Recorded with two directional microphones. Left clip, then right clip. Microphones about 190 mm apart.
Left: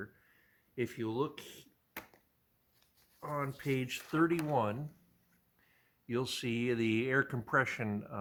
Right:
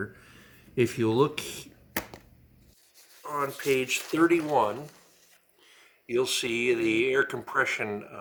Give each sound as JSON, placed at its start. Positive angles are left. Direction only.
{"t": 0.8, "sound": "speech", "side_deg": 35}
{"t": 3.2, "sound": "speech", "side_deg": 35}